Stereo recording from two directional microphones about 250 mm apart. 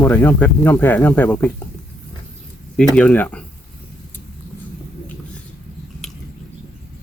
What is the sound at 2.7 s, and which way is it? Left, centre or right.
Speech, centre.